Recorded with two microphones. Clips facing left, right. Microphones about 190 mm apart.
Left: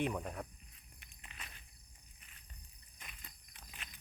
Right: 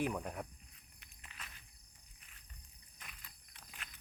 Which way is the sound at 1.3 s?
20° left (ahead or behind).